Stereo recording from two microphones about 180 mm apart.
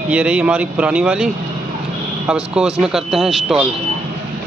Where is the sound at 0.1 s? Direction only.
5° right (ahead or behind).